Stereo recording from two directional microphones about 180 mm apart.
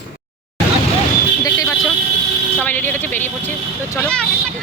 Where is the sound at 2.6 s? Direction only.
10° left (ahead or behind).